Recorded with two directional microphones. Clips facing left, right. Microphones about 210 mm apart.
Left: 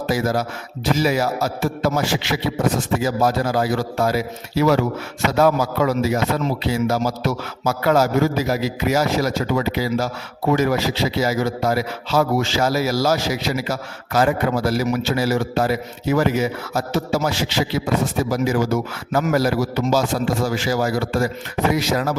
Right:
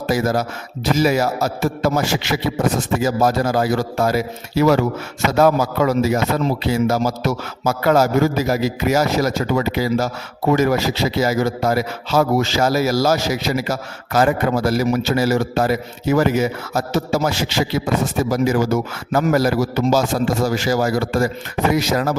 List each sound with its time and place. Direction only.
0.1 s speech: 45° right (ahead or behind)